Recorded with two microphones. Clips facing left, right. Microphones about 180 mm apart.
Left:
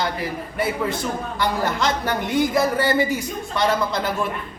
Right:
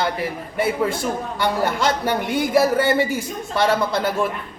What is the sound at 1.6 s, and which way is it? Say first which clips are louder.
Speech: right 2 dB; 5° right (ahead or behind).